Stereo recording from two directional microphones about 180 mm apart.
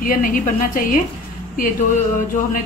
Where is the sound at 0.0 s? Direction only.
50° left (ahead or behind).